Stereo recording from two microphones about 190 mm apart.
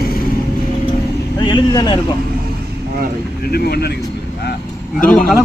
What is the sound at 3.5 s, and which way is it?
Speech, 55° left (ahead or behind).